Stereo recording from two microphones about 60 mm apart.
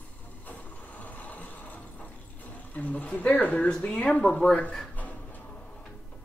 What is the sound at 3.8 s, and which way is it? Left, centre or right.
Speech, left.